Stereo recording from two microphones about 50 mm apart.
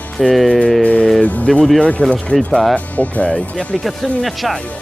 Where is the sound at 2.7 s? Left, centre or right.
Left.